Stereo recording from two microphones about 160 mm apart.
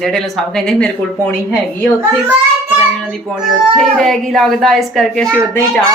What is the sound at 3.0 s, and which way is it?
Speech, centre (ahead or behind).